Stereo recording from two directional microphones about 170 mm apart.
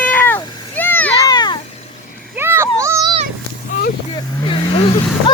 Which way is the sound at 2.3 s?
15° right (ahead or behind).